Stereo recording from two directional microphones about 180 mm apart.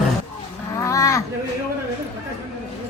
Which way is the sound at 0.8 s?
15° left (ahead or behind).